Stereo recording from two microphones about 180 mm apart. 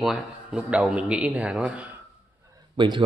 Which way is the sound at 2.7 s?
25° right (ahead or behind).